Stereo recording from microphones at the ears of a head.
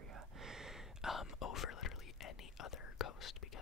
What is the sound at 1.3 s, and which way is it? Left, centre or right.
Whispering, left.